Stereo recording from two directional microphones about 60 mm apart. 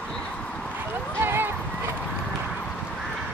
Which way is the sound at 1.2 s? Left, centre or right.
Right.